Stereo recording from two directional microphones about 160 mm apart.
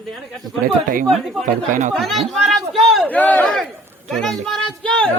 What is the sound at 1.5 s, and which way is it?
Speech, 55° right (ahead or behind).